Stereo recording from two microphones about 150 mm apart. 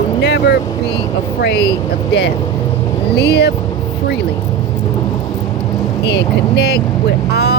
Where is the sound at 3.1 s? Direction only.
90° left.